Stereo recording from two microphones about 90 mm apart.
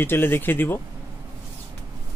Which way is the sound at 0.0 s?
25° left (ahead or behind).